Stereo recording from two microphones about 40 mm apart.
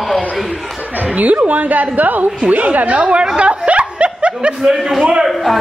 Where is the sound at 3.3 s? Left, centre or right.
Right.